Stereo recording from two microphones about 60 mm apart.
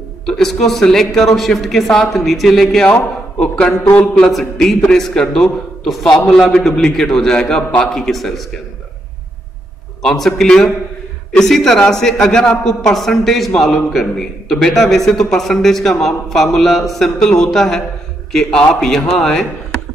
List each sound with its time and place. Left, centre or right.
0.2 s a man's voice: centre
2.9 s a man's voice: left
4.0 s a man's voice: centre
10.0 s a man's voice: centre